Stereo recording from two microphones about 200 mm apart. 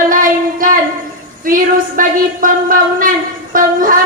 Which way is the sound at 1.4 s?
45° right (ahead or behind).